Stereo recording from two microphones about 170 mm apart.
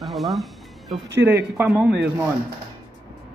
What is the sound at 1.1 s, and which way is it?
A man's voice, 15° right (ahead or behind).